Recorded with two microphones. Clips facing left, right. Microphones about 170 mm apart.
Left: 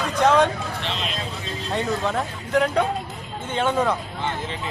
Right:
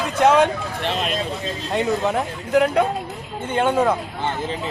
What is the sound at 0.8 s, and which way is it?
Speech, 50° right (ahead or behind).